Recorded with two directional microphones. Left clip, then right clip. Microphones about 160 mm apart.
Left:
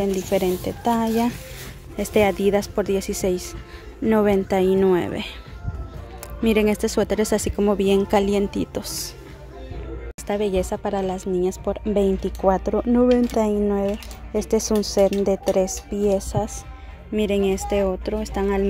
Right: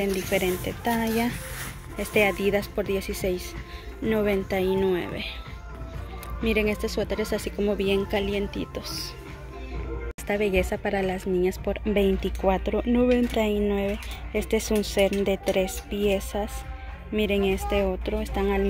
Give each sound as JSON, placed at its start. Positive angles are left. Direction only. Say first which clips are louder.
{"t": 0.0, "sound": "speech", "louder": "left 4 dB", "side_deg": 25}
{"t": 6.4, "sound": "speech", "louder": "left 5 dB", "side_deg": 45}
{"t": 7.6, "sound": "speech", "louder": "left 5 dB", "side_deg": 40}
{"t": 10.2, "sound": "a woman's voice", "louder": "left 2 dB", "side_deg": 20}